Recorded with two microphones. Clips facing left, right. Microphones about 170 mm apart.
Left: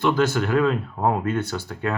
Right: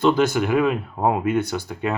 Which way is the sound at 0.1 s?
15° right (ahead or behind).